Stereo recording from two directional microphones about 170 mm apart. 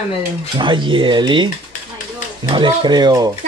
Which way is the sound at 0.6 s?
30° right (ahead or behind).